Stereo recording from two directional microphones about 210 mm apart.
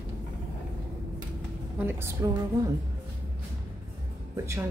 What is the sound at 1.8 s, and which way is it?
Speech, 15° right (ahead or behind).